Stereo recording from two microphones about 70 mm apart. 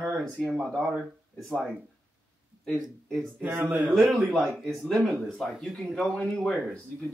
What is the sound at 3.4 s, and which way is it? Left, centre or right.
Speech, right.